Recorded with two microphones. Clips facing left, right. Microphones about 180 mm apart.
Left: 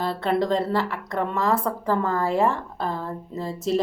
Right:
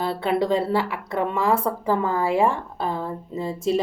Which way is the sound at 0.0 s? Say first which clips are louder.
Right 1 dB; 5° right (ahead or behind).